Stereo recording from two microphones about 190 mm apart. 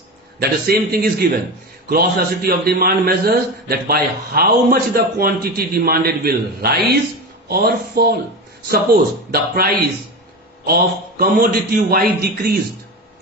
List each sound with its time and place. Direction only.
0.3 s a man's voice: 55° right (ahead or behind)
10.7 s a man's voice: 50° right (ahead or behind)